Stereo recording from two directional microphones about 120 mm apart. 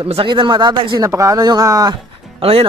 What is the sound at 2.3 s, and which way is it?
Speech, 50° right (ahead or behind).